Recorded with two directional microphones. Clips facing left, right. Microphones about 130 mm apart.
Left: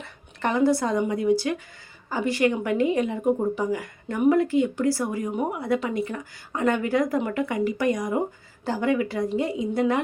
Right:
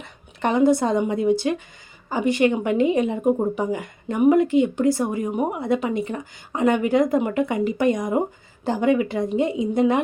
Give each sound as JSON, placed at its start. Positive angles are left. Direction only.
{"t": 0.0, "sound": "a woman's voice", "side_deg": -20}